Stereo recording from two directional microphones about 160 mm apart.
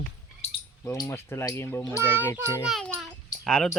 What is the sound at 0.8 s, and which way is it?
Speech, 15° left (ahead or behind).